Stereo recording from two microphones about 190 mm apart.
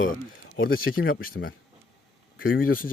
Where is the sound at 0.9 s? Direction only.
90° left.